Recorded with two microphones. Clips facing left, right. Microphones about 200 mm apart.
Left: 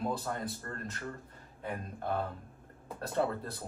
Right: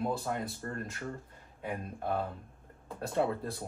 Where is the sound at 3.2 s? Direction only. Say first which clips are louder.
Right 1 dB; 5° right (ahead or behind).